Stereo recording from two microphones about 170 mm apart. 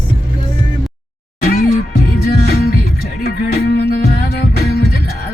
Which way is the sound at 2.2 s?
60° left (ahead or behind).